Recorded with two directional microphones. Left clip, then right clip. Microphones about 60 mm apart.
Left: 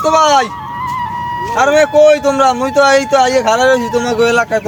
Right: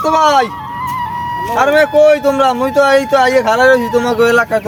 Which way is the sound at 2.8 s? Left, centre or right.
Centre.